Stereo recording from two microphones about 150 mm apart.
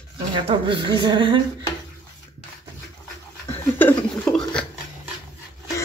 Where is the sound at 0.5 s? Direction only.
35° right (ahead or behind).